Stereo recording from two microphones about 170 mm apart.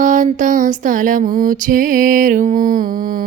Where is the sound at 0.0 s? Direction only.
50° right (ahead or behind).